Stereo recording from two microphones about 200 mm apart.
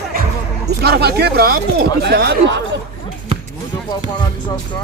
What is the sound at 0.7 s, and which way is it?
Speech, 55° right (ahead or behind).